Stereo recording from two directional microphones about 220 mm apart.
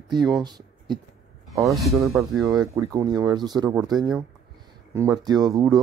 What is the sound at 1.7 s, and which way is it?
Speech, centre (ahead or behind).